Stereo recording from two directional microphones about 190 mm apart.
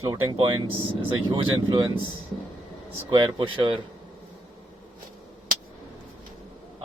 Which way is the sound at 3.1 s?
25° right (ahead or behind).